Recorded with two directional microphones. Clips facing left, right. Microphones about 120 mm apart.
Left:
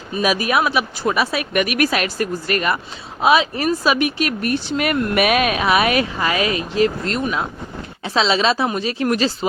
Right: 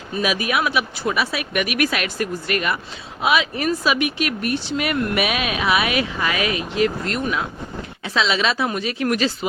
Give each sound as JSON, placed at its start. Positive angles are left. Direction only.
{"t": 0.2, "sound": "speech", "side_deg": 40}